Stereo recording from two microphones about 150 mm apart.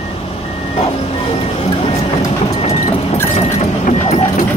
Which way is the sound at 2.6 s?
45° left (ahead or behind).